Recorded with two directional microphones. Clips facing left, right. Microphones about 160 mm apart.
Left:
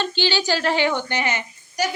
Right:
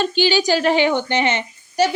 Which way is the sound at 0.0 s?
15° right (ahead or behind).